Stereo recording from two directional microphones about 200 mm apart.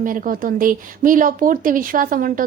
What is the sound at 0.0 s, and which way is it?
Speech, 45° right (ahead or behind).